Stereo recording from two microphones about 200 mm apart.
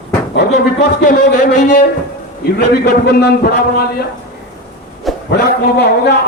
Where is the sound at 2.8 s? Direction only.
55° left (ahead or behind).